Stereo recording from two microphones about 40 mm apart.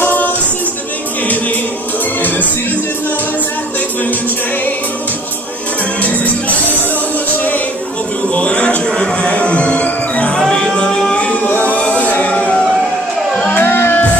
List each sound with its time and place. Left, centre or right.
8.4 s a sound: left
9.3 s music: left
10.5 s music: left
11.1 s music: left
12.3 s music: left
13.5 s music: left